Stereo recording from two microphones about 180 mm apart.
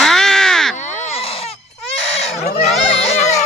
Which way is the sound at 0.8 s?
40° left (ahead or behind).